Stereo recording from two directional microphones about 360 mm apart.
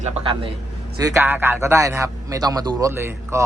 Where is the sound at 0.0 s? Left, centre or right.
Centre.